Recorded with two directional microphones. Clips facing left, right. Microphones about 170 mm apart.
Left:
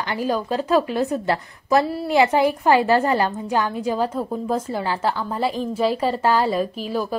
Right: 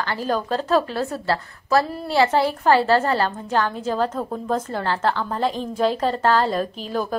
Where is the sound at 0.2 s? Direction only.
10° left (ahead or behind).